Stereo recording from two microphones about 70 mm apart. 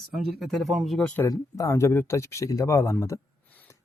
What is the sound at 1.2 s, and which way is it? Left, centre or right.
Speech, left.